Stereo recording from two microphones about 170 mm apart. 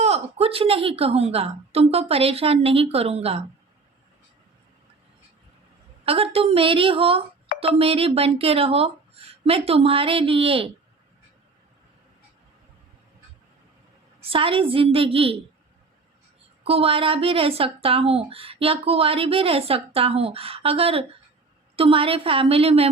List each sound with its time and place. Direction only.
0.0 s speech: 35° right (ahead or behind)
6.1 s speech: 35° right (ahead or behind)
14.2 s speech: 35° right (ahead or behind)
16.6 s speech: 35° right (ahead or behind)